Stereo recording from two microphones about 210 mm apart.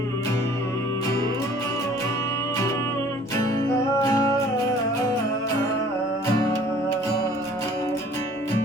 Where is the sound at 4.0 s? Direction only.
15° left (ahead or behind).